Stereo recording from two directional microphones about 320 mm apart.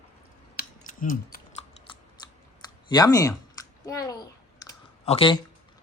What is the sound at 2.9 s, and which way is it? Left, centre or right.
A child's voice, centre.